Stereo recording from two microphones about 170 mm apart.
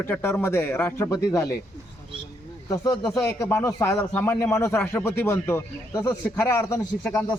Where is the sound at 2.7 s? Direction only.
20° left (ahead or behind).